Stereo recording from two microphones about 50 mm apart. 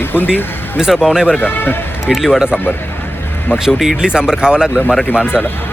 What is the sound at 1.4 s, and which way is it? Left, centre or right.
Speech, left.